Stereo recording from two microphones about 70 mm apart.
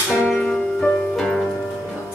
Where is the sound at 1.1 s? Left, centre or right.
Centre.